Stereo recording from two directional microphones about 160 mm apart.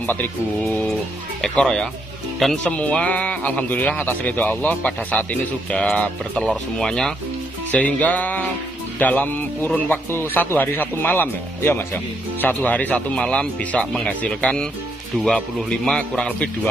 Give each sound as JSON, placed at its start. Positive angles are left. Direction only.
{"t": 0.7, "sound": "speech", "side_deg": 5}